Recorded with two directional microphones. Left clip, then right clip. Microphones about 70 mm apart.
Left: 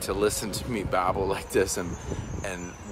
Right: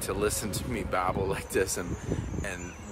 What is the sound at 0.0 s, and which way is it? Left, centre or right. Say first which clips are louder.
Speech: left 4 dB; left.